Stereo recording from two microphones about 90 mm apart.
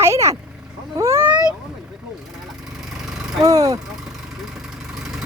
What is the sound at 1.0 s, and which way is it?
Vehicle, 30° right (ahead or behind).